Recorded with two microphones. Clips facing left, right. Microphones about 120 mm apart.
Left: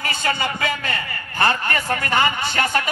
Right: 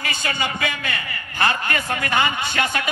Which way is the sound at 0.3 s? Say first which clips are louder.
Left 3 dB; 35° left (ahead or behind).